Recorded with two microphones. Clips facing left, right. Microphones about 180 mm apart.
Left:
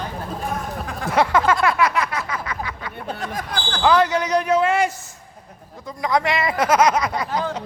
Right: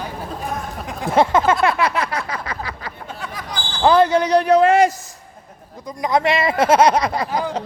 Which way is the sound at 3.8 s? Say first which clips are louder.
Right 4 dB; 30° right (ahead or behind).